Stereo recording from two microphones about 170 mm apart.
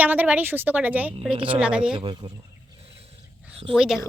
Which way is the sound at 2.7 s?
35° right (ahead or behind).